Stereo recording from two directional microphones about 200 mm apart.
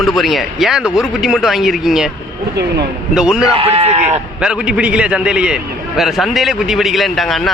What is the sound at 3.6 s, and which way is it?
Speech, 30° right (ahead or behind).